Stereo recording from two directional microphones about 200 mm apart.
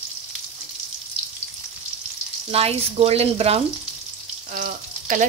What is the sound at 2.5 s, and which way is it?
Speech, 30° right (ahead or behind).